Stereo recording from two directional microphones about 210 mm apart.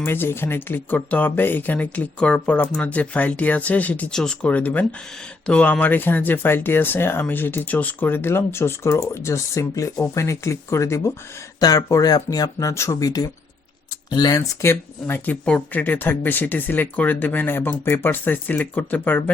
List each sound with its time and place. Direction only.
0.0 s speech: 10° left (ahead or behind)